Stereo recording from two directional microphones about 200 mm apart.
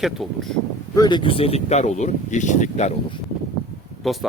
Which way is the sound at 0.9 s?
20° left (ahead or behind).